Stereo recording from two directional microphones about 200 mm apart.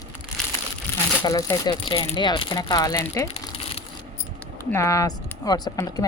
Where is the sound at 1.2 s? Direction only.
20° left (ahead or behind).